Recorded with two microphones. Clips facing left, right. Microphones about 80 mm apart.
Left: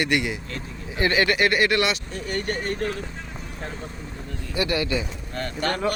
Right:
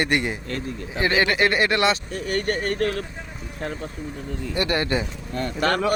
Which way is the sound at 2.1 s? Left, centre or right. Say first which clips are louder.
Right 3 dB; right.